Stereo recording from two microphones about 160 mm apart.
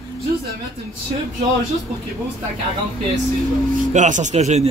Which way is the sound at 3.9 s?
50° right (ahead or behind).